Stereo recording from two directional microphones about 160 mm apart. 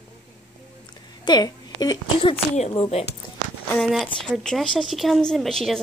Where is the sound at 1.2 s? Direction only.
25° left (ahead or behind).